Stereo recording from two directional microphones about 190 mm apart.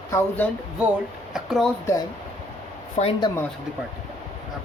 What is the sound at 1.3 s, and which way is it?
Speech, centre (ahead or behind).